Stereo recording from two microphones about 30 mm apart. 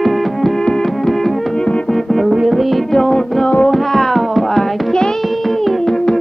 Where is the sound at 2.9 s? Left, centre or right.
Centre.